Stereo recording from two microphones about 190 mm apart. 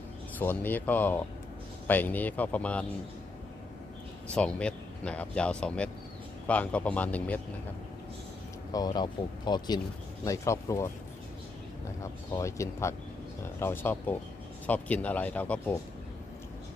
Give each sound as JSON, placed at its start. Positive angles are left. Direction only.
{"t": 0.3, "sound": "speech", "side_deg": 10}
{"t": 4.3, "sound": "speech", "side_deg": 5}
{"t": 8.7, "sound": "speech", "side_deg": 20}
{"t": 12.0, "sound": "speech", "side_deg": 15}